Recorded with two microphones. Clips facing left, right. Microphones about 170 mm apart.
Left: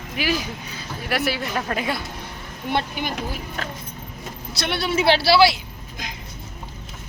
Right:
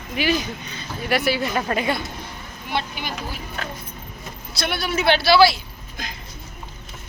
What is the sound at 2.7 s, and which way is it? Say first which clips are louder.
Speech: left 3 dB; 50° left (ahead or behind).